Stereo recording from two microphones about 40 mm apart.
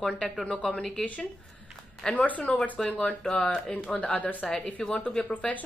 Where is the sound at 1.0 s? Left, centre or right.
Left.